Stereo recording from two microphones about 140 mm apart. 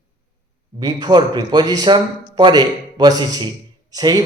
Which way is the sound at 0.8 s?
30° right (ahead or behind).